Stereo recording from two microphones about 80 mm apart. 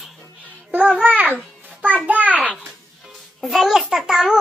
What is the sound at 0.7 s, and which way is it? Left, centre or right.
A child's voice, centre.